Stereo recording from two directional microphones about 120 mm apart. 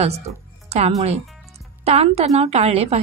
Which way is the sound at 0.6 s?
65° right (ahead or behind).